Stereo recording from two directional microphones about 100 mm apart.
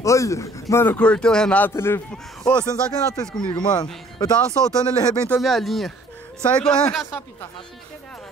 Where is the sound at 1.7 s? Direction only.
25° left (ahead or behind).